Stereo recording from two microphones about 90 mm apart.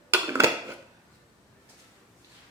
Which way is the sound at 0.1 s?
30° right (ahead or behind).